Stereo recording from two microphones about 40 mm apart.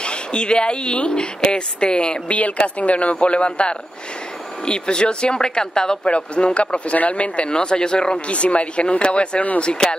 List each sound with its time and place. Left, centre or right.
0.0 s speech: left
6.1 s speech: left
9.8 s speech: centre